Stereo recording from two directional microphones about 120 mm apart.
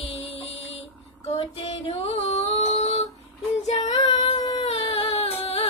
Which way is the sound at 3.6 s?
75° left (ahead or behind).